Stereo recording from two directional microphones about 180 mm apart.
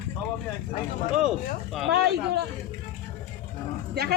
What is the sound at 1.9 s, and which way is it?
Speech, 65° right (ahead or behind).